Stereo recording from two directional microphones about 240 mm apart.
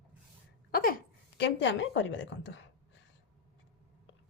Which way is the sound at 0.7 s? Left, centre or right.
Left.